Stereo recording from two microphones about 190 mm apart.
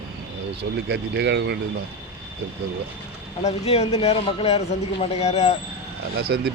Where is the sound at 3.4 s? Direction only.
35° left (ahead or behind).